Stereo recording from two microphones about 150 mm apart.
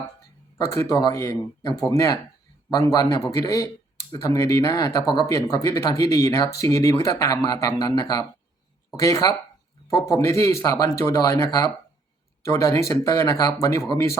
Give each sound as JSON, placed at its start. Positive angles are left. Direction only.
{"t": 0.6, "sound": "speech", "side_deg": 20}